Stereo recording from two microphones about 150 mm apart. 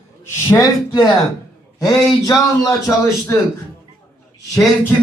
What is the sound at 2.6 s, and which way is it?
Speech, 20° left (ahead or behind).